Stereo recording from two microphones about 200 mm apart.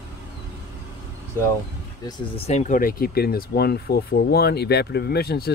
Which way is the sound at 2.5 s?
35° left (ahead or behind).